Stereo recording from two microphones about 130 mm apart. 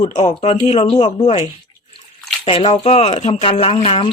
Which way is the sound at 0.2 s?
35° left (ahead or behind).